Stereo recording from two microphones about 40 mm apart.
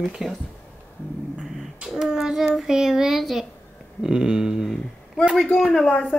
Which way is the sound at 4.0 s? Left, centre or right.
Centre.